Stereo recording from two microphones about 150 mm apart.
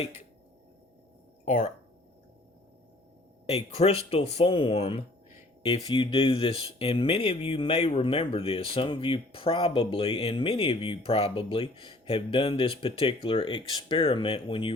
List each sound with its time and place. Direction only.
1.5 s speech: 55° left (ahead or behind)
3.4 s speech: 45° left (ahead or behind)